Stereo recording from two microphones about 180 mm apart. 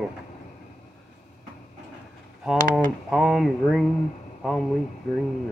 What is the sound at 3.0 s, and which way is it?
Speech, centre (ahead or behind).